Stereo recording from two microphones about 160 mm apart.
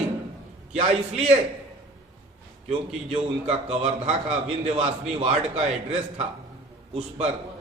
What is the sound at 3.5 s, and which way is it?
A man's voice, 40° right (ahead or behind).